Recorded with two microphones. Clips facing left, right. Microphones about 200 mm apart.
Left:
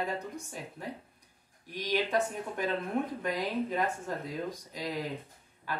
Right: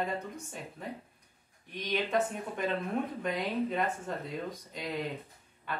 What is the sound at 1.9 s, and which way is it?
Speech, centre (ahead or behind).